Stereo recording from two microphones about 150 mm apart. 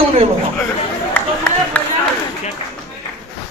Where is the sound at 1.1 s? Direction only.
10° left (ahead or behind).